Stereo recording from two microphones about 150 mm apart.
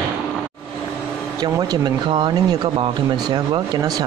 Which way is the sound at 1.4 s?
25° right (ahead or behind).